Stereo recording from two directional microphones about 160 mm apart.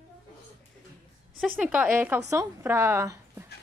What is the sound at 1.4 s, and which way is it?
A woman's voice, 5° right (ahead or behind).